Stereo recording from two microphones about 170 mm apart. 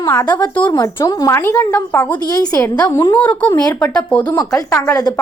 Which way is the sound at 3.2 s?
10° left (ahead or behind).